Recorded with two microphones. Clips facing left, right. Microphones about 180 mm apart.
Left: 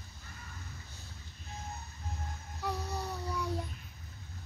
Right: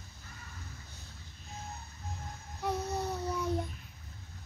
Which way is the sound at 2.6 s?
20° right (ahead or behind).